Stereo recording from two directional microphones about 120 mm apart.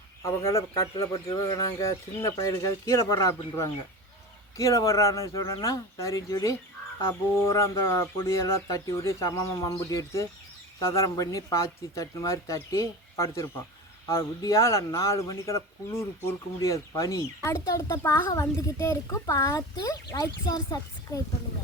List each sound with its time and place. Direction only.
0.2 s speech: 25° left (ahead or behind)